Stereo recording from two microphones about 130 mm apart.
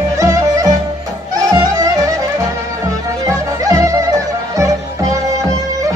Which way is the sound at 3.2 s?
25° right (ahead or behind).